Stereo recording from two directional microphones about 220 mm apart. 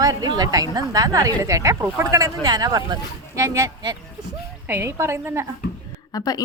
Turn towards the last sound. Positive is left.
turn(degrees=15)  # may be behind; listen again after turning